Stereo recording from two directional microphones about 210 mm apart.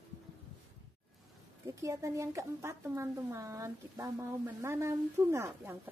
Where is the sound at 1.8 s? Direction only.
15° right (ahead or behind).